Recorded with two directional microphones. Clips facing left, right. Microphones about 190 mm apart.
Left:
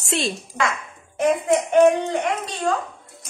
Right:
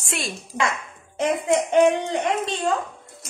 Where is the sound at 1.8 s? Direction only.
20° right (ahead or behind).